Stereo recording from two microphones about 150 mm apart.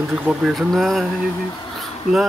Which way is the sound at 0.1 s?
5° right (ahead or behind).